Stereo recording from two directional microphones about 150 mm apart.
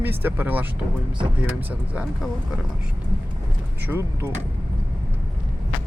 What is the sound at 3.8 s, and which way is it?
Speech, 15° right (ahead or behind).